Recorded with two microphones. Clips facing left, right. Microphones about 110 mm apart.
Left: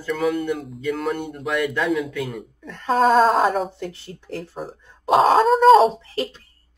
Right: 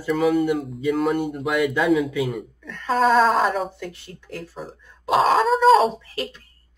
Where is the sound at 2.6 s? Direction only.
30° left (ahead or behind).